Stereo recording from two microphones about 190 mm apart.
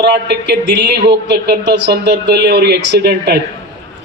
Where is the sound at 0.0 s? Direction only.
60° right (ahead or behind).